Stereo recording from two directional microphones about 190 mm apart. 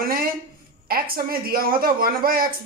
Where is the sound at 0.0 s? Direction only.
50° right (ahead or behind).